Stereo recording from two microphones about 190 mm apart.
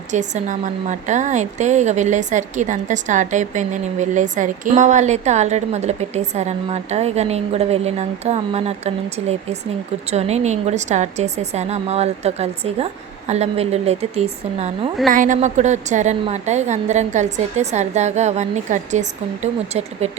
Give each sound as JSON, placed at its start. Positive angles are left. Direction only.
{"t": 0.1, "sound": "a woman's voice", "side_deg": -40}